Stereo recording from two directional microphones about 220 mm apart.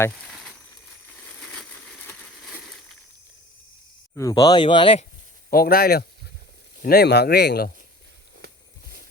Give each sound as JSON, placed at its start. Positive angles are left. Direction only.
{"t": 4.1, "sound": "speech", "side_deg": 15}
{"t": 5.5, "sound": "speech", "side_deg": 45}